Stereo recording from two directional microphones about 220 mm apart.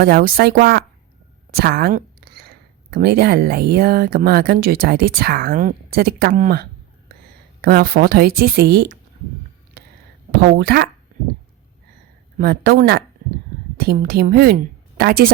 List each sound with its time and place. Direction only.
0.0 s speech: 45° right (ahead or behind)
1.5 s a sound: 45° right (ahead or behind)
2.9 s speech: 45° right (ahead or behind)
10.6 s speech: 45° right (ahead or behind)
12.4 s a woman's voice: 45° right (ahead or behind)